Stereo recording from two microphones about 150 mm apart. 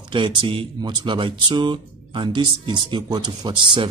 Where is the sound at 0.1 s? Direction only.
35° right (ahead or behind).